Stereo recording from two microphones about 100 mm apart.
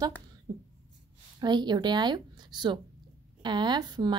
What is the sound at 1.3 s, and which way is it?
A woman's voice, 45° right (ahead or behind).